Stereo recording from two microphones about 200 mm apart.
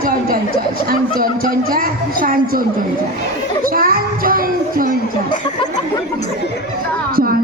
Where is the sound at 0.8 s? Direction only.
45° right (ahead or behind).